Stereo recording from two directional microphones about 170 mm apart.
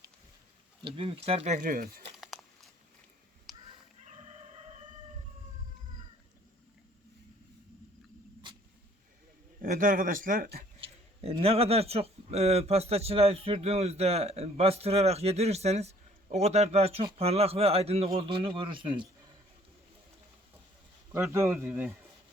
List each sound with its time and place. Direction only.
0.8 s speech: 30° right (ahead or behind)
1.5 s speech: 55° right (ahead or behind)
2.1 s crumpling: centre (ahead or behind)
4.0 s a sound: 40° right (ahead or behind)
9.6 s a man's voice: 55° right (ahead or behind)
10.8 s speech: 35° right (ahead or behind)
21.1 s speech: 15° right (ahead or behind)